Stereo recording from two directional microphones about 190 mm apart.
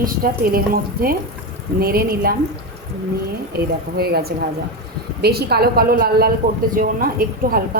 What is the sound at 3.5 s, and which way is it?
A woman's voice, 55° right (ahead or behind).